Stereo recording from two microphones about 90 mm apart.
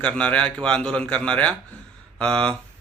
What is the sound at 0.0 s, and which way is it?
Speech, 10° left (ahead or behind).